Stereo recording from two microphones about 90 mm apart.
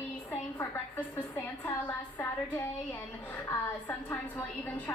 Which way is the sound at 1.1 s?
35° left (ahead or behind).